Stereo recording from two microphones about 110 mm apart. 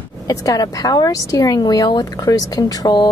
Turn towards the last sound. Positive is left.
turn(degrees=40)  # may be behind; listen again after turning